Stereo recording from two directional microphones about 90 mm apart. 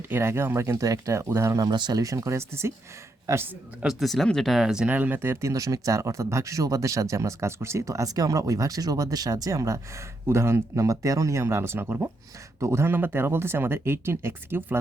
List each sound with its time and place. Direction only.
0.1 s speech: 30° right (ahead or behind)
1.6 s speech: 55° right (ahead or behind); by 3.4 s 35° right (ahead or behind)
3.8 s speech: centre (ahead or behind); by 14.8 s 25° right (ahead or behind)